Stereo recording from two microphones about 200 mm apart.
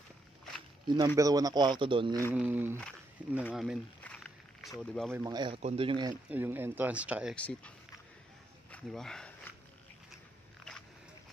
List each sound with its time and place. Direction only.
0.8 s speech: 20° right (ahead or behind)
2.3 s speech: 10° right (ahead or behind)
3.5 s a sound: centre (ahead or behind)
5.1 s speech: 20° right (ahead or behind)
6.2 s speech: 10° right (ahead or behind)
7.3 s speech: 5° left (ahead or behind)
8.7 s speech: 5° left (ahead or behind)